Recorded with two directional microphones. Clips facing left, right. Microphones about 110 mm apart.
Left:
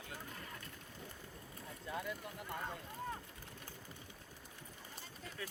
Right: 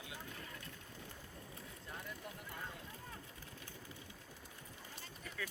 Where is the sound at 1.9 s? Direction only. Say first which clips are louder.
Left 6 dB; 80° left.